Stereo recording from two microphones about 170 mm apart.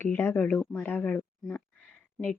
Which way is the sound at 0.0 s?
15° left (ahead or behind).